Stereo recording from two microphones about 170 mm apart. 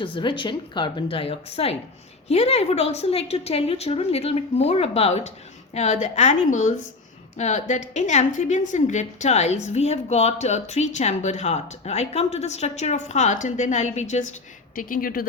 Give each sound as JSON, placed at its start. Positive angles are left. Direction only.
{"t": 0.0, "sound": "a woman's voice", "side_deg": 30}
{"t": 14.8, "sound": "speech", "side_deg": 55}